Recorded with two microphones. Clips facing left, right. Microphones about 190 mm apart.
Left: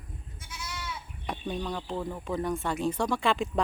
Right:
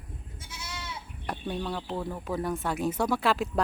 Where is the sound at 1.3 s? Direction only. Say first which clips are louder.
Even; 5° right (ahead or behind).